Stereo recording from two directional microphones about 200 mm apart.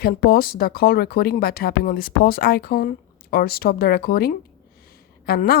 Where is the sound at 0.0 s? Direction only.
50° left (ahead or behind).